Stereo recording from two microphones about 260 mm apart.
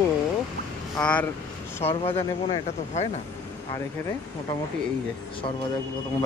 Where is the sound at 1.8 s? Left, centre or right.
Left.